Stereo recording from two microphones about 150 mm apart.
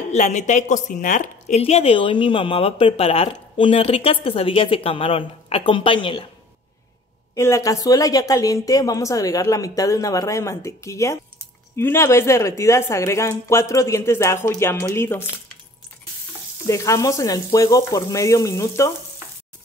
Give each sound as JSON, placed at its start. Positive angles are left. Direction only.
{"t": 0.1, "sound": "a woman's voice", "side_deg": 50}
{"t": 1.6, "sound": "speech", "side_deg": 40}
{"t": 7.3, "sound": "speech", "side_deg": 20}
{"t": 16.6, "sound": "speech", "side_deg": 20}